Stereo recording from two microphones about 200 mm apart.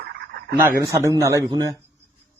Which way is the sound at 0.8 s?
15° right (ahead or behind).